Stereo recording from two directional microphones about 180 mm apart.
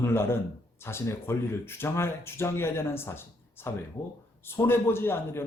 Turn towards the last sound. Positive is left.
turn(degrees=15)  # may be behind; listen again after turning